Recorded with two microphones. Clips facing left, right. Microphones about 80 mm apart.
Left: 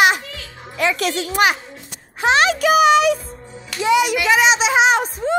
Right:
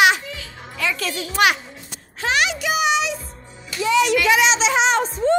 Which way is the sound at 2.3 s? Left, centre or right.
Left.